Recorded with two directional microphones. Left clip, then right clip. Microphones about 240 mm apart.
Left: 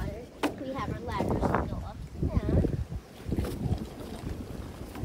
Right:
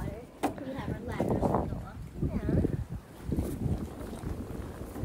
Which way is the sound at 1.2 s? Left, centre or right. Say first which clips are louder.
Even; centre.